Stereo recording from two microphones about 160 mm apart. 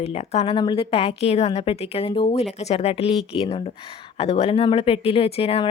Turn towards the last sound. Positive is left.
turn(degrees=35)  # may be behind; listen again after turning